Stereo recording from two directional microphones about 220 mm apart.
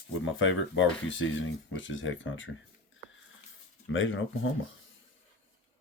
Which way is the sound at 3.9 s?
60° left (ahead or behind).